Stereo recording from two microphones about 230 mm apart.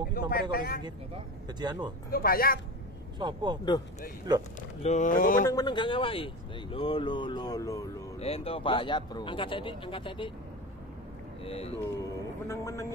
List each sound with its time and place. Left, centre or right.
0.1 s speech: left
0.8 s speech: centre
2.0 s speech: left
3.2 s speech: centre
4.6 s speech: left
5.5 s speech: centre
8.2 s speech: left
11.4 s speech: left
12.0 s a man's voice: centre